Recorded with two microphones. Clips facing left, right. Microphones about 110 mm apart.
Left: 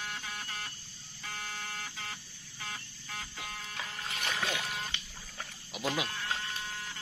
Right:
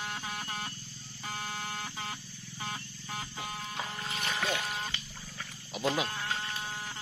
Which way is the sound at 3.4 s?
30° right (ahead or behind).